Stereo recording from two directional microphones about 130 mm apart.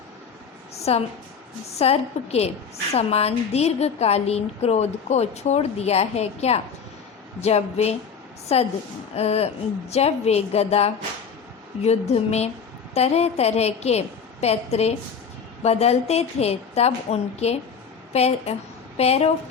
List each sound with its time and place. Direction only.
0.9 s a woman's voice: 55° left (ahead or behind)